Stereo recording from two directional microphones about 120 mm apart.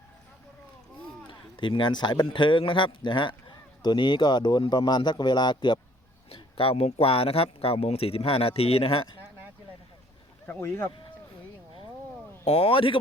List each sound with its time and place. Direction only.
1.3 s speech: 45° left (ahead or behind)
10.4 s speech: 15° left (ahead or behind)
12.5 s speech: 55° left (ahead or behind)